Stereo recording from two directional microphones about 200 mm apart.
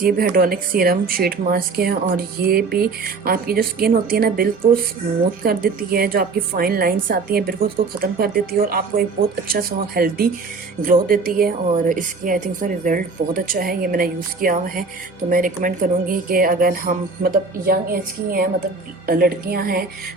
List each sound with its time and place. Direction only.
0.0 s a woman's voice: 45° right (ahead or behind)